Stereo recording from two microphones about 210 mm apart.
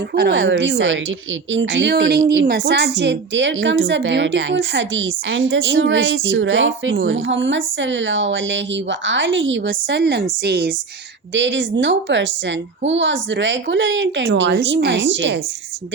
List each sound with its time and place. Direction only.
0.1 s a woman's voice: 50° right (ahead or behind)
11.3 s a woman's voice: 60° right (ahead or behind)